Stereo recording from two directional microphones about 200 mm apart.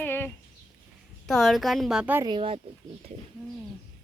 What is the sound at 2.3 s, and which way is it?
Speech, 25° right (ahead or behind).